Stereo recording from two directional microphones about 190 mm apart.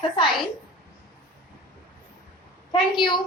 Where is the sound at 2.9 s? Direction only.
25° left (ahead or behind).